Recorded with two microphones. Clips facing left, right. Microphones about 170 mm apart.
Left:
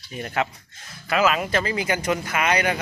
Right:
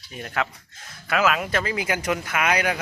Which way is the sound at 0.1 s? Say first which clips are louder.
Left 2 dB; 5° left (ahead or behind).